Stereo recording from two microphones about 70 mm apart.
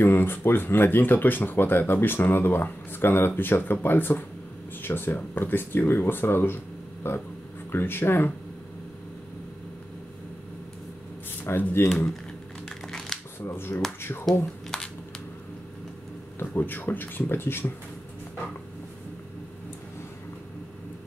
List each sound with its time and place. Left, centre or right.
0.0 s speech: left
11.4 s speech: left
12.6 s crumpling: centre
13.4 s speech: left
14.7 s a sound: centre
16.3 s speech: left